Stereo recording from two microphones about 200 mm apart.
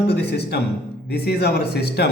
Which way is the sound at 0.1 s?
55° left (ahead or behind).